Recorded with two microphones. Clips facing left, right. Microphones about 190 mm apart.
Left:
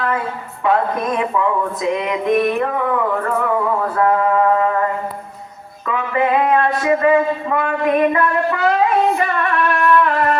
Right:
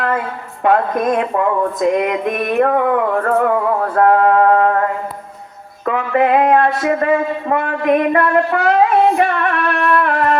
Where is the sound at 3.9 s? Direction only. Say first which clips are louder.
Right 5 dB; 60° right (ahead or behind).